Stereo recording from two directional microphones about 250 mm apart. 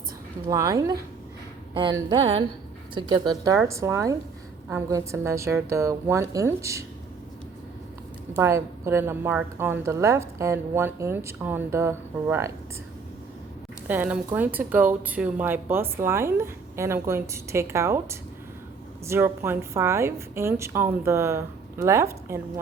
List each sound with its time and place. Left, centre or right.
0.4 s speech: centre
1.8 s a sound: centre
2.9 s speech: centre
8.4 s speech: centre
13.8 s speech: centre